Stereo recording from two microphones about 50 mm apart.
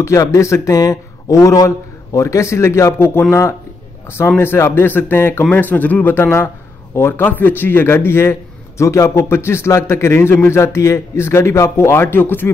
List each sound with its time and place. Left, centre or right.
0.0 s a man's voice: left
1.3 s a man's voice: left
4.6 s speech: left
5.5 s speech: left
6.1 s speech: left
7.2 s a man's voice: left
12.0 s speech: left